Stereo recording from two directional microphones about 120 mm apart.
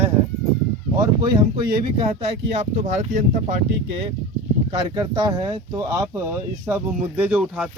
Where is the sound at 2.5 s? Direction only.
70° right (ahead or behind); by 3.2 s 90° right.